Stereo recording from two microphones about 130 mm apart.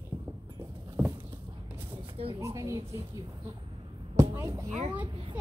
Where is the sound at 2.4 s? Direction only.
25° right (ahead or behind).